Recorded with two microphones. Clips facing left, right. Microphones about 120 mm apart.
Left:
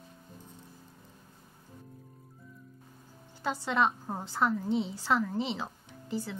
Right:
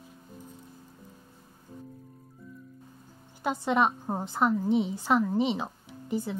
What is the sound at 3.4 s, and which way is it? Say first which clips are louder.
A woman's voice: right 3 dB; 20° right (ahead or behind).